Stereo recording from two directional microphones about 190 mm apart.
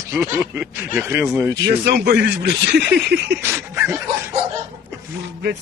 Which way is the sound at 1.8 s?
60° right (ahead or behind).